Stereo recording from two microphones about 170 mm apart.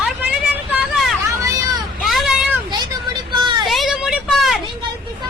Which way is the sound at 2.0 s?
Centre (ahead or behind).